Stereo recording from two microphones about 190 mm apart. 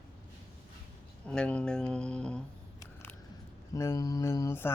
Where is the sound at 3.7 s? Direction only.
15° left (ahead or behind).